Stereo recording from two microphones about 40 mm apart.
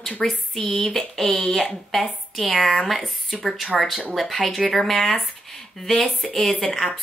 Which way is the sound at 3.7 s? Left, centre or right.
Centre.